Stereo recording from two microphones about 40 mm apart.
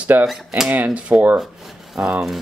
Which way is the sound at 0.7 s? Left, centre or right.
Right.